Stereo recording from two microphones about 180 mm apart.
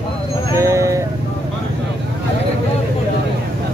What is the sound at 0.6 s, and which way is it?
Speech, 15° right (ahead or behind).